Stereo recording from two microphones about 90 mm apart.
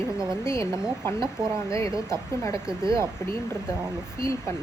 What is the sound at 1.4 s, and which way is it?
Speech, 45° right (ahead or behind).